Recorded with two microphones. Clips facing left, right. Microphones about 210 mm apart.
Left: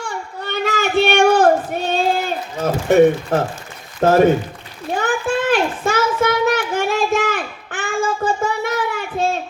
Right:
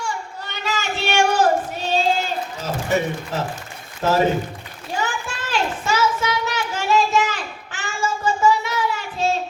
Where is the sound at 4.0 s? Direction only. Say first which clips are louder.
Left 6 dB; 55° left (ahead or behind).